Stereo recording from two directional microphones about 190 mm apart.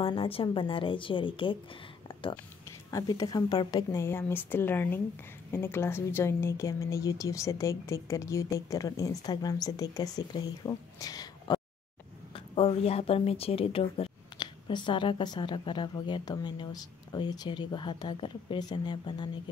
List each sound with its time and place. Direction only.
0.0 s speech: 30° left (ahead or behind)
2.9 s speech: 20° left (ahead or behind)
12.5 s speech: 30° left (ahead or behind)